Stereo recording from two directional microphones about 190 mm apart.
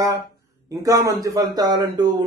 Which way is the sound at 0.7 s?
20° right (ahead or behind).